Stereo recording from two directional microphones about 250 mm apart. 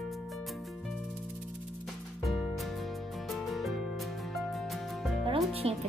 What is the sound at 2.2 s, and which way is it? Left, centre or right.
Music, centre.